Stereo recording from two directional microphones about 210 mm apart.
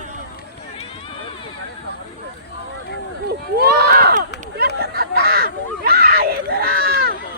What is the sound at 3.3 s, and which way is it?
Run, 50° right (ahead or behind).